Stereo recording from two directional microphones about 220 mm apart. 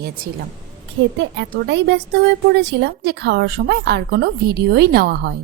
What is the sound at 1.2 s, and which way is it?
Speech, 55° right (ahead or behind).